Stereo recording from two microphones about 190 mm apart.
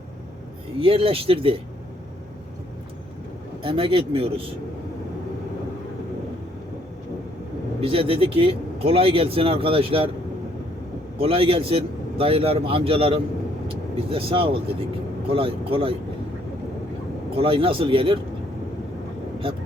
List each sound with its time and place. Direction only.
0.8 s speech: 30° right (ahead or behind)
3.6 s speech: 25° right (ahead or behind)
7.8 s speech: 30° right (ahead or behind)
11.2 s speech: 30° right (ahead or behind)
17.3 s speech: 30° right (ahead or behind)